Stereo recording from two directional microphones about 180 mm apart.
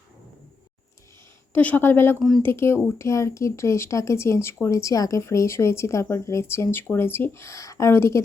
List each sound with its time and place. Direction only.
1.5 s speech: 10° left (ahead or behind)
2.1 s speech: centre (ahead or behind)
2.4 s speech: 15° left (ahead or behind)